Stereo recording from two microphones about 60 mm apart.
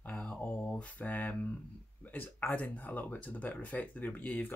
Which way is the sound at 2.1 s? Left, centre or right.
Left.